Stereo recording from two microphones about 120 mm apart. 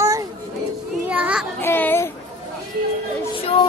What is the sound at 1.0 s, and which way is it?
Speech, 10° right (ahead or behind).